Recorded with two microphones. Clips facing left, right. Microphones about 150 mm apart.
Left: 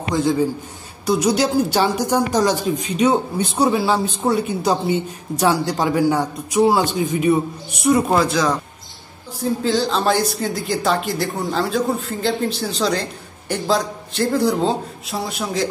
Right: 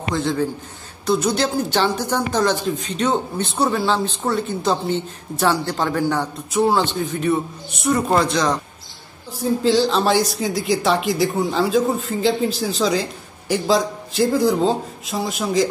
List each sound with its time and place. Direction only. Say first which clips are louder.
0.1 s speech: left 3 dB; 10° left (ahead or behind)